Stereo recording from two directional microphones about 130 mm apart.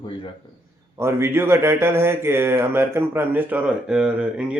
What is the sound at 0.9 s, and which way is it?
Speech, 20° right (ahead or behind).